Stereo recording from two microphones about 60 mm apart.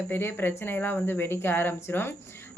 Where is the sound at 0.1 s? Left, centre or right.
Left.